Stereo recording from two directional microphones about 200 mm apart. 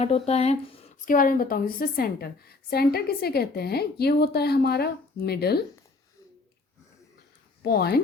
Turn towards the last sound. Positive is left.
turn(degrees=50)  # may be behind; listen again after turning